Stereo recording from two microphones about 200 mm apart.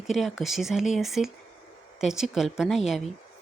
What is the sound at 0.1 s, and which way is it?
Speech, centre (ahead or behind).